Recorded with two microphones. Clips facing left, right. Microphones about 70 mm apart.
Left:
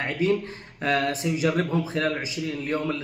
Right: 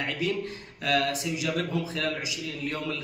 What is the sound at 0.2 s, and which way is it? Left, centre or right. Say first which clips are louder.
A man's voice: left 6 dB; left.